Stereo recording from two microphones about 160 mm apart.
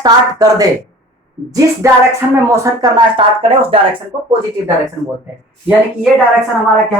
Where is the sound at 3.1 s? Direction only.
35° right (ahead or behind).